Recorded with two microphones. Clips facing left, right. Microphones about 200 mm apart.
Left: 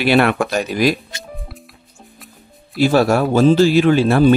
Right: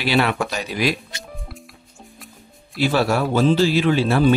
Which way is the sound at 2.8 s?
45° left (ahead or behind).